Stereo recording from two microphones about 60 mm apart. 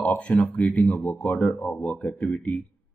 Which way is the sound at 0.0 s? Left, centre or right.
Left.